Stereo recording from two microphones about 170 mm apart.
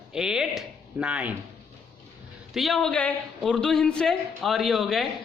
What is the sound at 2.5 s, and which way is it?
A man's voice, centre (ahead or behind).